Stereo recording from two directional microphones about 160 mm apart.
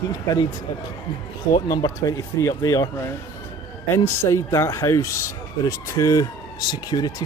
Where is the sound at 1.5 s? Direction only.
25° left (ahead or behind).